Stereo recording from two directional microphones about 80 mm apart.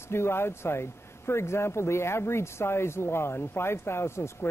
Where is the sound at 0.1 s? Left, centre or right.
Left.